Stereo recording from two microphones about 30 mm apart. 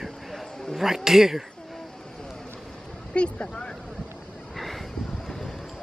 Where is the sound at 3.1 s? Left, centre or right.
Left.